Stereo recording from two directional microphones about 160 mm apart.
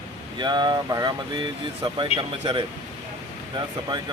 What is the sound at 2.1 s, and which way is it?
Speech, 40° left (ahead or behind).